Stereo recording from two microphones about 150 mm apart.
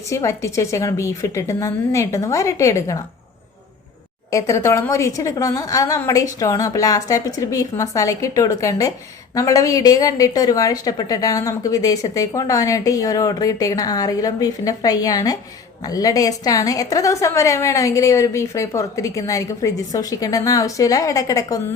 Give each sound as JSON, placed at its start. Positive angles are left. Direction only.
{"t": 0.1, "sound": "a woman's voice", "side_deg": 20}
{"t": 4.3, "sound": "a woman's voice", "side_deg": 20}